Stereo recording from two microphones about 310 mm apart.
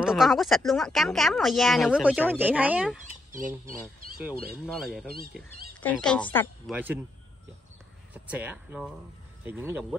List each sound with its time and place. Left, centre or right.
0.0 s speech: centre
3.3 s speech: right
3.8 s speech: centre
5.0 s speech: right
5.3 s speech: centre
8.1 s speech: centre